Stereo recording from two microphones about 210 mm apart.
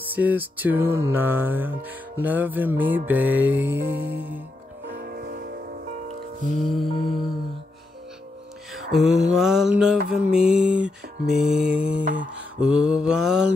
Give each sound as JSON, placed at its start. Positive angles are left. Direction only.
{"t": 0.1, "sound": "music", "side_deg": -10}
{"t": 4.8, "sound": "music", "side_deg": -45}
{"t": 6.6, "sound": "mantra", "side_deg": 0}
{"t": 8.7, "sound": "mantra", "side_deg": 0}